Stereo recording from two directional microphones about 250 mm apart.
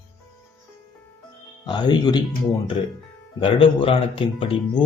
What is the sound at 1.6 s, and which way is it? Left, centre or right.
Speech, centre.